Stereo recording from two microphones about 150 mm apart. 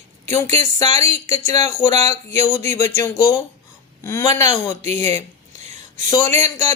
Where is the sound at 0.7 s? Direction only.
25° left (ahead or behind).